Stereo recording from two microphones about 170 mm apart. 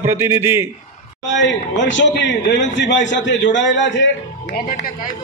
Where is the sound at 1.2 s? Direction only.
90° left.